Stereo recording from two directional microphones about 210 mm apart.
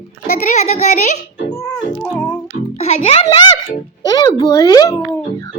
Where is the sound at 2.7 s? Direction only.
30° left (ahead or behind).